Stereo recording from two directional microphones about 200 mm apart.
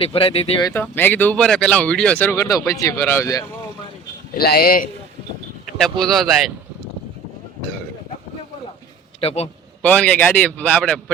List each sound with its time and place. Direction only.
0.0 s speech: 30° left (ahead or behind)
0.7 s speech: 10° left (ahead or behind)
4.4 s a man's voice: 50° left (ahead or behind)
5.7 s speech: centre (ahead or behind)
9.2 s a man's voice: 30° left (ahead or behind)
9.8 s speech: 5° left (ahead or behind)